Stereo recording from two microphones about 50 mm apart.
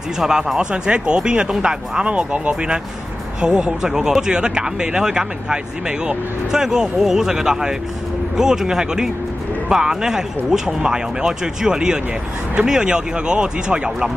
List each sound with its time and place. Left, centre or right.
0.2 s speech: centre